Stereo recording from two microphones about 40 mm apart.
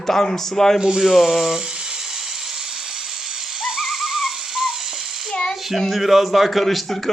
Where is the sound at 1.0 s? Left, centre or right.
Centre.